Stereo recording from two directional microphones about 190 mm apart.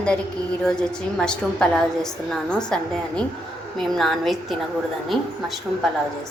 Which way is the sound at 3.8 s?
Centre (ahead or behind).